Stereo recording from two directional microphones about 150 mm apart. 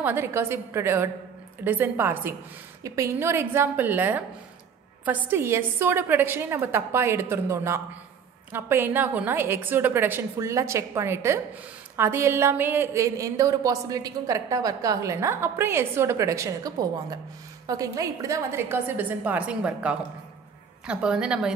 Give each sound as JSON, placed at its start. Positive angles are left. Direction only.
{"t": 0.0, "sound": "a woman's voice", "side_deg": -15}